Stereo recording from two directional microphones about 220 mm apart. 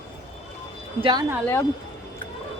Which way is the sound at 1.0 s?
20° right (ahead or behind).